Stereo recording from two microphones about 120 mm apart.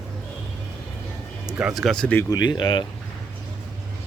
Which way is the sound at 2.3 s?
35° left (ahead or behind).